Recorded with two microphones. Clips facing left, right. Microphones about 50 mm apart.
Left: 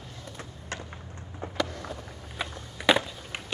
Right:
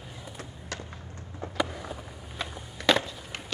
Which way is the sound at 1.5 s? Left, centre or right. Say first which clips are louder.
Right 1 dB; centre.